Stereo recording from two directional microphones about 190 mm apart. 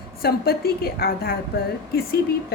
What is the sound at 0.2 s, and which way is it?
A woman's voice, 55° left (ahead or behind).